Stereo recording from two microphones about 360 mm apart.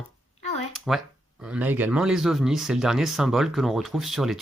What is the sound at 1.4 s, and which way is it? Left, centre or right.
Speech, centre.